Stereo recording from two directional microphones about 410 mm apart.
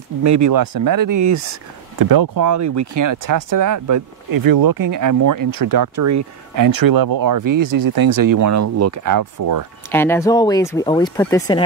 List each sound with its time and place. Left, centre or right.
0.2 s speech: right
2.0 s speech: right
9.8 s speech: centre